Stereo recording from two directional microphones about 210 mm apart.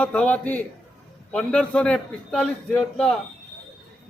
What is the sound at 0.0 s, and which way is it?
A man's voice, 5° left (ahead or behind).